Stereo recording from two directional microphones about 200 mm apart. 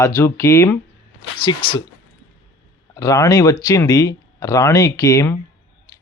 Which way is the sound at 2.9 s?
15° left (ahead or behind).